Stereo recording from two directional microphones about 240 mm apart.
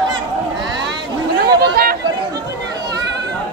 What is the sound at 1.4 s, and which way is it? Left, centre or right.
Chatter, right.